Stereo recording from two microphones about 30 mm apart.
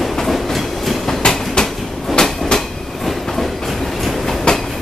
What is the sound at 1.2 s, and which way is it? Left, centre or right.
Train, left.